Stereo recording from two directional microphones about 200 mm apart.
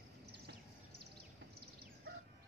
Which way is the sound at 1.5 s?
50° right (ahead or behind).